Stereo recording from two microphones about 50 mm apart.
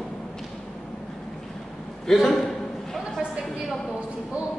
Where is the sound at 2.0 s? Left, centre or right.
Centre.